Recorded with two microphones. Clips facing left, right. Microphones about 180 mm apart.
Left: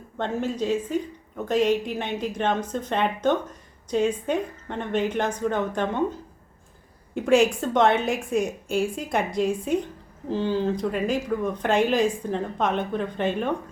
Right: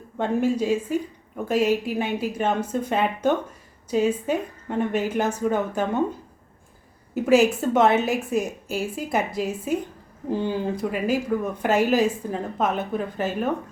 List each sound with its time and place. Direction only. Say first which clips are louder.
0.2 s speech: right 4 dB; 10° right (ahead or behind)
7.1 s a woman's voice: right 1 dB; 5° right (ahead or behind)